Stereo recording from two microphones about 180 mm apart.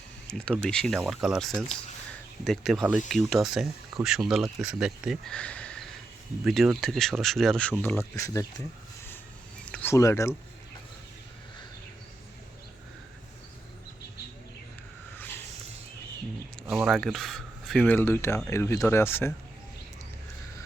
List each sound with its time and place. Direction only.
0.3 s speech: 5° left (ahead or behind)
9.7 s speech: 15° left (ahead or behind)
16.6 s speech: centre (ahead or behind)